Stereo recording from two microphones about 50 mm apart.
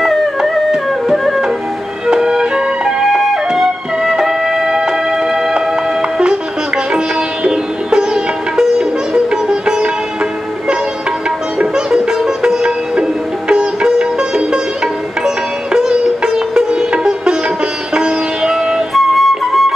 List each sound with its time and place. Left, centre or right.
0.4 s music: centre
2.0 s music: centre
7.4 s sitar: centre
11.5 s sitar: centre
17.9 s music: centre
18.5 s music: centre